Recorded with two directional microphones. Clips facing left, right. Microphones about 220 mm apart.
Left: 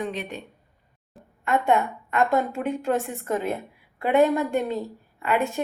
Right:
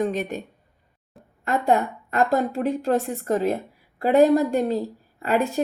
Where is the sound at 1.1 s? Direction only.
Centre (ahead or behind).